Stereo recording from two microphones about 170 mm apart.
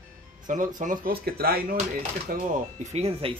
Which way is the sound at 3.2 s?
30° right (ahead or behind).